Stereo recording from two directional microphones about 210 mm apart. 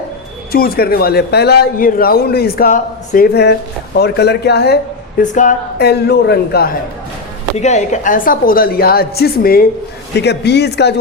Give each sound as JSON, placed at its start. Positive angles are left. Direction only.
{"t": 0.5, "sound": "a man's voice", "side_deg": 45}
{"t": 5.2, "sound": "speech", "side_deg": 35}
{"t": 5.8, "sound": "a man's voice", "side_deg": 50}
{"t": 7.5, "sound": "a man's voice", "side_deg": 35}